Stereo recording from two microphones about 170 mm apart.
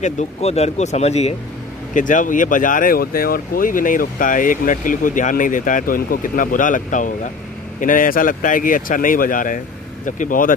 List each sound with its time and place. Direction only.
0.0 s speech: 40° left (ahead or behind)
2.0 s speech: 50° left (ahead or behind)